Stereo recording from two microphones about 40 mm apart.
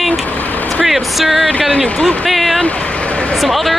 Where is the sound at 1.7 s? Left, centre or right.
Left.